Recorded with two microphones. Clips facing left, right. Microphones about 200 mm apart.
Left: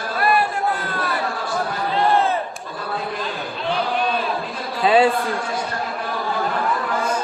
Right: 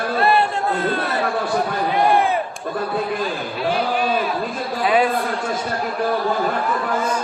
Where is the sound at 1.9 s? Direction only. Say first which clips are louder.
Right 1 dB; 15° right (ahead or behind).